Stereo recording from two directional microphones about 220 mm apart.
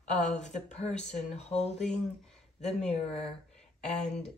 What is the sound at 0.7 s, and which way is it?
Speech, 30° left (ahead or behind).